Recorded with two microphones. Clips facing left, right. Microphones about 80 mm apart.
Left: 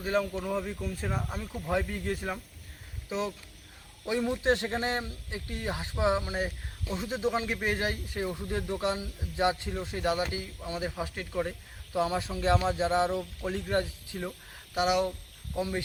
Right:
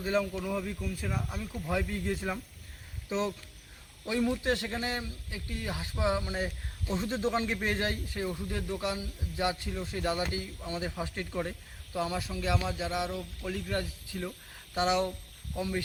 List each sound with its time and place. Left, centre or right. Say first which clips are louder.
0.0 s speech: left 1 dB; centre
6.9 s speech: even; centre
11.9 s speech: left 4 dB; left